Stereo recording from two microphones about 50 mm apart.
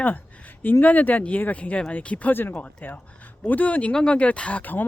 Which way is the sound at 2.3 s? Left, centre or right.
Left.